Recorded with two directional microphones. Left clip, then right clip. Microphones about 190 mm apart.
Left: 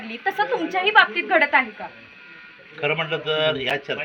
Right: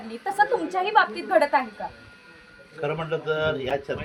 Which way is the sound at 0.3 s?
20° right (ahead or behind).